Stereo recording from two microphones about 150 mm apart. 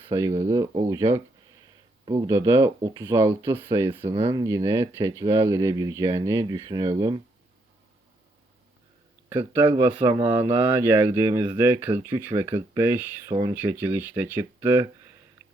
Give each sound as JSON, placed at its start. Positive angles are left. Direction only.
{"t": 0.1, "sound": "speech", "side_deg": -20}
{"t": 2.9, "sound": "speech", "side_deg": -30}
{"t": 3.2, "sound": "speech", "side_deg": -15}
{"t": 9.4, "sound": "speech", "side_deg": -35}
{"t": 10.3, "sound": "speech", "side_deg": -15}